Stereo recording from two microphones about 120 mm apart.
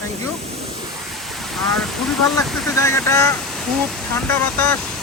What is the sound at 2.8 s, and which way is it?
Speech, 25° left (ahead or behind).